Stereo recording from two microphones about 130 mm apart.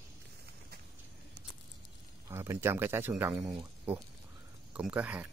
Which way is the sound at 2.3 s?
20° right (ahead or behind).